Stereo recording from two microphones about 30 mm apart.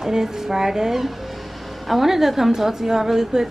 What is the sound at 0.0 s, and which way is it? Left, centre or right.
A woman's voice, centre.